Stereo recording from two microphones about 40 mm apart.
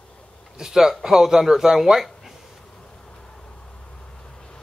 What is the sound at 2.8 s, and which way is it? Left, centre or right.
Vehicle, centre.